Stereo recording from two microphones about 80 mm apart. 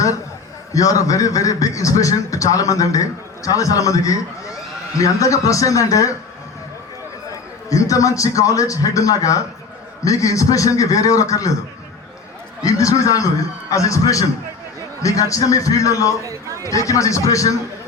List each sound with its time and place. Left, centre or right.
0.7 s a man's voice: left
7.7 s a man's voice: left
12.6 s a man's voice: left
16.2 s a man's voice: right
16.6 s a man's voice: left